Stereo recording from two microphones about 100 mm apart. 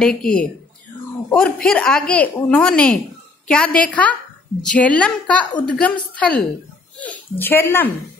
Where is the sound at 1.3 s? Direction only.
10° left (ahead or behind).